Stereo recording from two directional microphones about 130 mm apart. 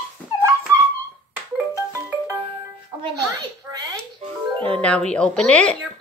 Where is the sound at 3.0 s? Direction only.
30° right (ahead or behind).